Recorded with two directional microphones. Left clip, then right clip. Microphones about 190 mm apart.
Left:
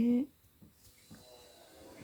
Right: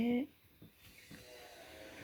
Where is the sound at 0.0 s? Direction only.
40° left (ahead or behind).